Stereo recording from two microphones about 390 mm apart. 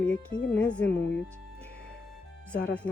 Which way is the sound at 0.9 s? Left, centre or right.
Left.